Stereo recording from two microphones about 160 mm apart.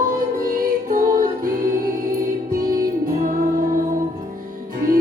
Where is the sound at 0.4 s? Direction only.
60° right (ahead or behind).